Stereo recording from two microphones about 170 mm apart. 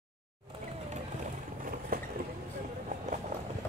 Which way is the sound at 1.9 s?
55° right (ahead or behind).